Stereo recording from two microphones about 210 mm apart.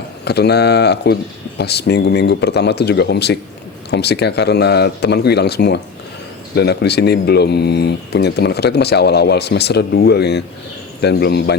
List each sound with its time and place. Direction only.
0.3 s speech: 50° left (ahead or behind)